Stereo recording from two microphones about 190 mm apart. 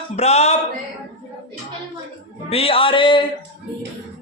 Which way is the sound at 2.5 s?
30° left (ahead or behind).